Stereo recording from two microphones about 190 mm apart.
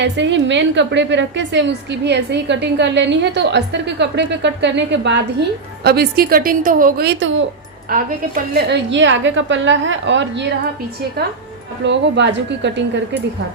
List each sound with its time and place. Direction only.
0.0 s a woman's voice: 70° right (ahead or behind)
5.8 s a woman's voice: 55° right (ahead or behind)
8.5 s a woman's voice: 65° right (ahead or behind)
11.9 s a woman's voice: 65° right (ahead or behind)